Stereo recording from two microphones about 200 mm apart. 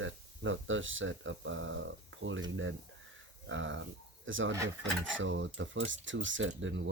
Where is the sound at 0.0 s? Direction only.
75° right (ahead or behind).